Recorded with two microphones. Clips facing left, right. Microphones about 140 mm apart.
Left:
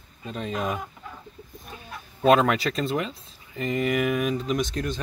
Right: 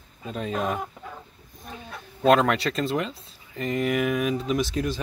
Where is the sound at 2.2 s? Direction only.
Centre (ahead or behind).